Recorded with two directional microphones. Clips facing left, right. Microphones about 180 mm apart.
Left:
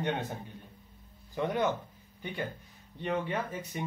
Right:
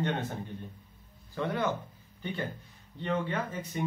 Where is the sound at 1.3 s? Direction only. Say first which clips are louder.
Left 1 dB; 15° left (ahead or behind).